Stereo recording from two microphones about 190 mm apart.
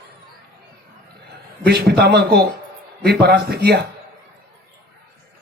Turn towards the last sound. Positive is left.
turn(degrees=-60)  # may be behind; listen again after turning